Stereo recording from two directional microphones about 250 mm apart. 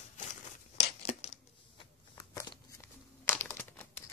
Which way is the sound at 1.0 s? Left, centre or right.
Left.